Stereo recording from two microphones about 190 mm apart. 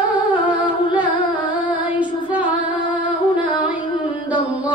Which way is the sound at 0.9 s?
10° right (ahead or behind).